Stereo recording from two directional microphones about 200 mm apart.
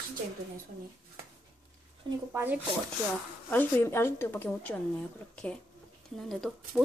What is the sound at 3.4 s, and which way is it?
Speech, 10° left (ahead or behind).